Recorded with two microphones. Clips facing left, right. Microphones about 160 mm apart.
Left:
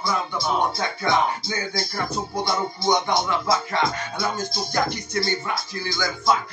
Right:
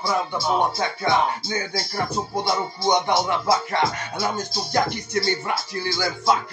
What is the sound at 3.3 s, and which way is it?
Speech, 25° right (ahead or behind).